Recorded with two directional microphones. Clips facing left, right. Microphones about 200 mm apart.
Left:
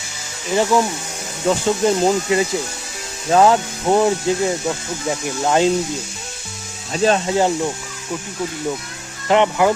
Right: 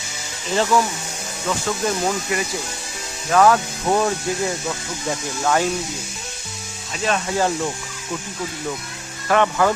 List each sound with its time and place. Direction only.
0.5 s speech: 15° left (ahead or behind)
1.5 s speech: 25° left (ahead or behind)
5.4 s speech: 20° left (ahead or behind)
6.9 s speech: 35° left (ahead or behind)
7.3 s speech: 20° left (ahead or behind)
9.3 s speech: 15° left (ahead or behind)